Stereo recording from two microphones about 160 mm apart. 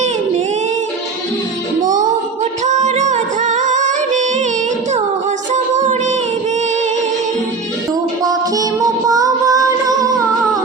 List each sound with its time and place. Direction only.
1.8 s music: 50° right (ahead or behind)
5.7 s music: 50° right (ahead or behind)
8.2 s music: 20° right (ahead or behind)